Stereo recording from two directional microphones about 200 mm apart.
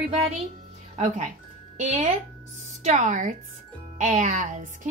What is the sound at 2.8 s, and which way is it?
Speech, 35° right (ahead or behind).